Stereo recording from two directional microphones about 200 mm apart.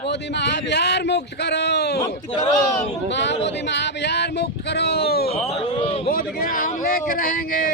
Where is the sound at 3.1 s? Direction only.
60° left (ahead or behind).